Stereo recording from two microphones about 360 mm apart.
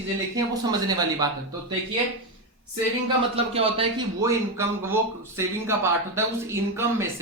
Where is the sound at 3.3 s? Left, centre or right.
Centre.